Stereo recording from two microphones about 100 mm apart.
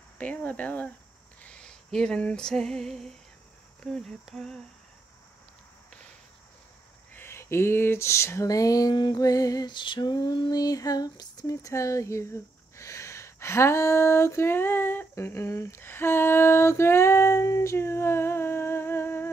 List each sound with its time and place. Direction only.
0.2 s speech: 15° left (ahead or behind)
1.4 s female singing: 10° left (ahead or behind)
3.8 s speech: 5° left (ahead or behind)
7.2 s a sound: 25° left (ahead or behind)
8.9 s lullaby: 45° left (ahead or behind); by 19.3 s 20° left (ahead or behind)